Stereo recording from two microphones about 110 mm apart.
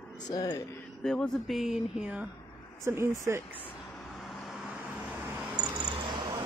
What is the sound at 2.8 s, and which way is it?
Speech, 25° right (ahead or behind).